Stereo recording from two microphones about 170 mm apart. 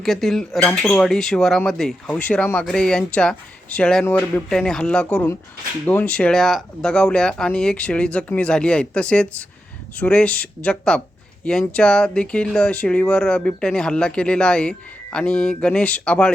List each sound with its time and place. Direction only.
0.0 s speech: centre (ahead or behind)